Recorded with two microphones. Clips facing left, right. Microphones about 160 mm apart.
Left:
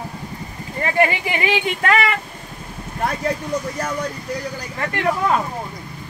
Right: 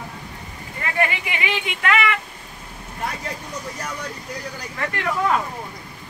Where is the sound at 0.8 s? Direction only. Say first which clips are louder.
Left 5 dB; 35° left (ahead or behind).